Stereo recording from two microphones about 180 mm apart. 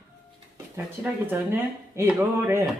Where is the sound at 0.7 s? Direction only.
10° right (ahead or behind).